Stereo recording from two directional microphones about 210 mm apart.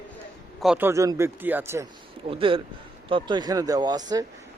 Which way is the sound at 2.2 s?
25° right (ahead or behind).